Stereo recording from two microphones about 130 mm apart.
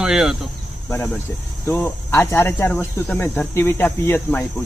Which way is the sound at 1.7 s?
20° left (ahead or behind).